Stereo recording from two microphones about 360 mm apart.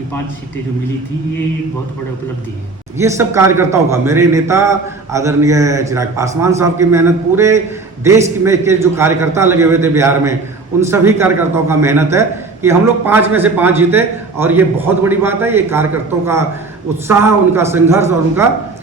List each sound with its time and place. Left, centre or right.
3.0 s a man's voice: centre